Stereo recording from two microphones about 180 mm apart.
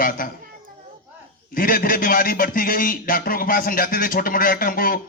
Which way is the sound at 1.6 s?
50° left (ahead or behind).